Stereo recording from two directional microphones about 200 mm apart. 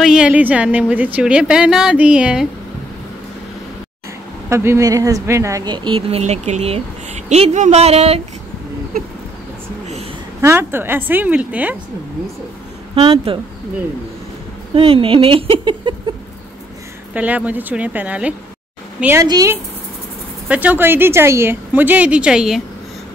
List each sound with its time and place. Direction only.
0.0 s a woman's voice: 5° right (ahead or behind)
4.5 s a woman's voice: 15° right (ahead or behind); by 8.2 s 30° right (ahead or behind)
10.4 s a woman's voice: 10° right (ahead or behind)
12.9 s a woman's voice: 30° right (ahead or behind)
14.8 s a woman's voice: 25° right (ahead or behind)
17.1 s a woman's voice: 5° right (ahead or behind)